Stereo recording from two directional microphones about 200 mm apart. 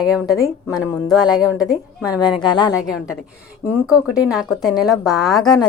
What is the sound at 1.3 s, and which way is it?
Speech, 5° right (ahead or behind).